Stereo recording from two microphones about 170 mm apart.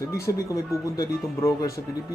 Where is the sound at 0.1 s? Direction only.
15° left (ahead or behind).